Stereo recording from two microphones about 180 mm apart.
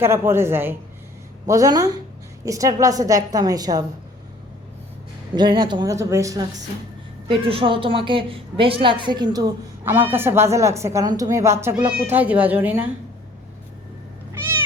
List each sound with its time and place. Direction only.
0.0 s a woman's voice: 15° right (ahead or behind)
5.3 s a woman's voice: 25° right (ahead or behind)
7.3 s a woman's voice: 30° right (ahead or behind); by 12.9 s 10° right (ahead or behind)